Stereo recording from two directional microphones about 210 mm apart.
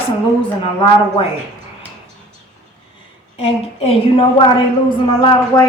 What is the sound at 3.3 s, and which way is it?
A woman's voice, 30° left (ahead or behind).